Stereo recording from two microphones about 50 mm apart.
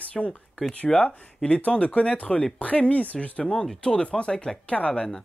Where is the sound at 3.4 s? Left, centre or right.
Centre.